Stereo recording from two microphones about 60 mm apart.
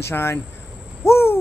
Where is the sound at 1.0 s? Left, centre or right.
Left.